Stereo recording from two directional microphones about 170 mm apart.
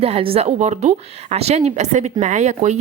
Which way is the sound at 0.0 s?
35° right (ahead or behind).